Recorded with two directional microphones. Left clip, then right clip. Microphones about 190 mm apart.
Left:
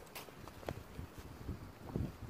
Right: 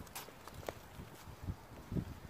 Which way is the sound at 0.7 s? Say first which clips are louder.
Even; 15° right (ahead or behind).